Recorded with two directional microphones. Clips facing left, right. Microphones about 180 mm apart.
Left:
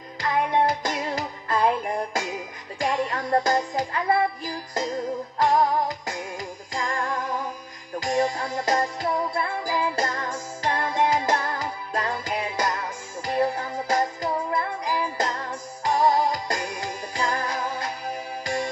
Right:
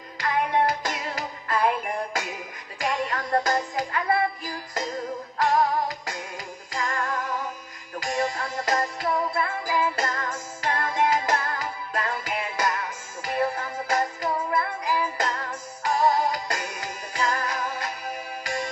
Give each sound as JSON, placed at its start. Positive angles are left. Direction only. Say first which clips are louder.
{"t": 0.2, "sound": "music", "louder": "left 1 dB", "side_deg": 25}
{"t": 6.7, "sound": "music", "louder": "left 1 dB", "side_deg": 25}